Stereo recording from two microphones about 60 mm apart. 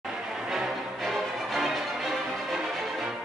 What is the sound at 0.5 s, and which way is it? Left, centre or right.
Music, centre.